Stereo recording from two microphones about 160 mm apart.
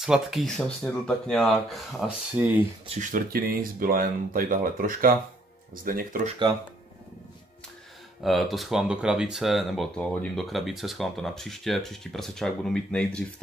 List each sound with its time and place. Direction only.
0.0 s speech: 5° right (ahead or behind)
2.9 s speech: 55° right (ahead or behind)
8.2 s speech: centre (ahead or behind)